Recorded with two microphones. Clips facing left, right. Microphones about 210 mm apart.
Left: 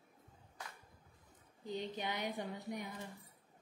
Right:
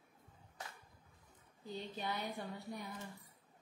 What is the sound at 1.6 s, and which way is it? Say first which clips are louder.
Speech: left 3 dB; 20° left (ahead or behind).